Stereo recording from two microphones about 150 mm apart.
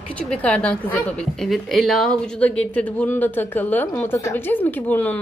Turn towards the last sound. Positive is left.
turn(degrees=10)  # may be behind; listen again after turning